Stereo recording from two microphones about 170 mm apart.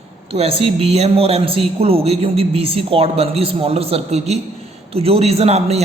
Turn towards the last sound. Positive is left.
turn(degrees=-40)  # may be behind; listen again after turning